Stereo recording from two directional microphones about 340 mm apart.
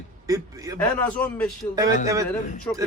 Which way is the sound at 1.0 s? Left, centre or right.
Centre.